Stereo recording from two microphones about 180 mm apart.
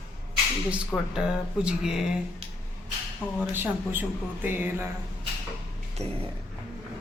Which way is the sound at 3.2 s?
10° left (ahead or behind).